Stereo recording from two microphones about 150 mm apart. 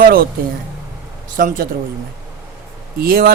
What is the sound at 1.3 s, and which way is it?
Speech, 65° right (ahead or behind).